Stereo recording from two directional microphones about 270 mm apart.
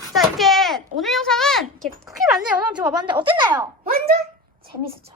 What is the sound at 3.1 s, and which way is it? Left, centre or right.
Speech, centre.